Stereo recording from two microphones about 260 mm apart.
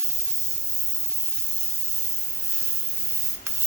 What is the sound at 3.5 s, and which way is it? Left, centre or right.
Spray, centre.